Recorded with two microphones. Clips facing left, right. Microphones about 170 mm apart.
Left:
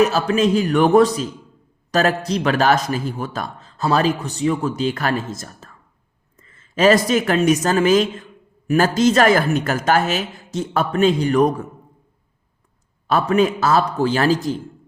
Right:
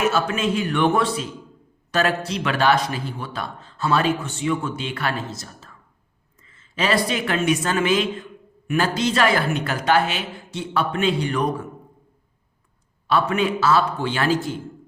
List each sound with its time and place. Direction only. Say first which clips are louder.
0.0 s a man's voice: left 5 dB; 35° left (ahead or behind)
13.1 s a man's voice: left 4 dB; 40° left (ahead or behind)